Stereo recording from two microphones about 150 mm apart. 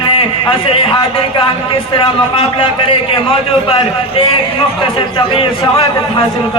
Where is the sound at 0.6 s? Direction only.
35° left (ahead or behind).